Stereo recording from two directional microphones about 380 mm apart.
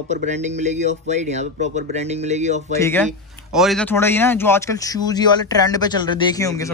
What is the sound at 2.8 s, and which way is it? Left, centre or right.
A man's voice, centre.